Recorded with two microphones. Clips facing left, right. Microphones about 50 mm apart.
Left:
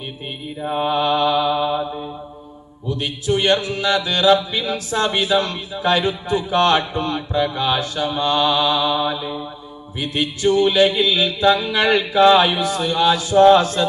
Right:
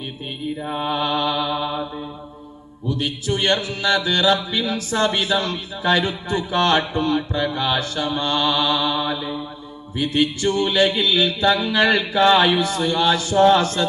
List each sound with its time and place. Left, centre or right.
0.6 s mantra: centre
2.9 s mantra: centre